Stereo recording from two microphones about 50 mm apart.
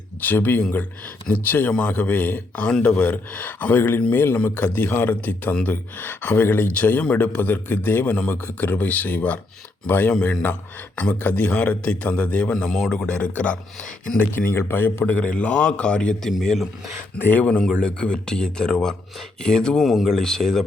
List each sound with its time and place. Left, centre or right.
0.2 s speech: left
2.6 s a man's voice: centre; by 4.4 s left
4.4 s speech: left
8.1 s a man's voice: left
10.1 s a man's voice: left
12.6 s speech: centre
12.9 s a man's voice: left
14.2 s speech: left
14.5 s a man's voice: left
15.0 s a man's voice: left
17.2 s a man's voice: left
17.4 s speech: left
19.8 s speech: centre